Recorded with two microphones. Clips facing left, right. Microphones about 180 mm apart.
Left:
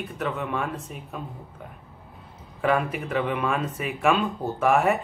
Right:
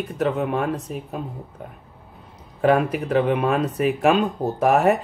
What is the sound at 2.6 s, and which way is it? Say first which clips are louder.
Speech: right 6 dB; 45° right (ahead or behind).